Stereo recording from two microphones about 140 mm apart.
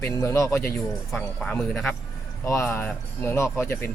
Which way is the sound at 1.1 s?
5° left (ahead or behind).